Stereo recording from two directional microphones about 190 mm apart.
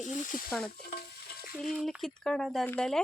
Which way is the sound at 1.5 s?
Centre (ahead or behind).